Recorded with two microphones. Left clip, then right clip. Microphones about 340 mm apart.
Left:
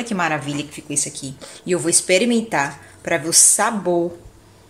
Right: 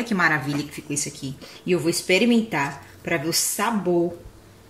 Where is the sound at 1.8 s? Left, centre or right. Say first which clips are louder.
Left 4 dB; left.